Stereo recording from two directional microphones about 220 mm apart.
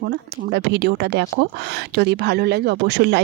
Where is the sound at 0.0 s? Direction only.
45° right (ahead or behind).